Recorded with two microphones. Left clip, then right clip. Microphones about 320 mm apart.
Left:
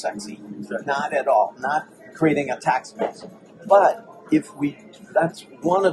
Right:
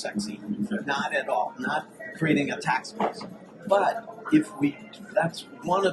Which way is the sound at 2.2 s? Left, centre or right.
Centre.